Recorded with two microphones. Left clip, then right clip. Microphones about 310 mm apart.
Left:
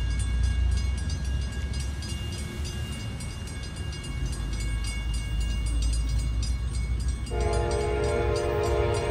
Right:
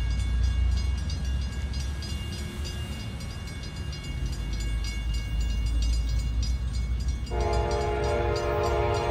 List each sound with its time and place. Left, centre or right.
7.3 s train: centre